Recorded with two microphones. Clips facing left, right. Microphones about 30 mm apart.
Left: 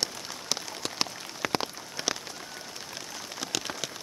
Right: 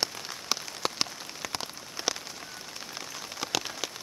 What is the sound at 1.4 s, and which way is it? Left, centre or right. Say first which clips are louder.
Rain on surface: left 7 dB; left.